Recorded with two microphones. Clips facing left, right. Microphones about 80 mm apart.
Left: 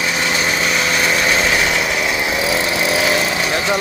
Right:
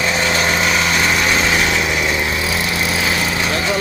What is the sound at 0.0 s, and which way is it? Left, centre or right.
Vehicle, centre.